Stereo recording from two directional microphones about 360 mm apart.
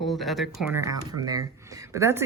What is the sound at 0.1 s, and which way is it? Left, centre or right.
Speech, centre.